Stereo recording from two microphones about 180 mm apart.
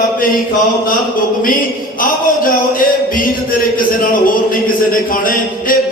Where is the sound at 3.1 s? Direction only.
50° left (ahead or behind).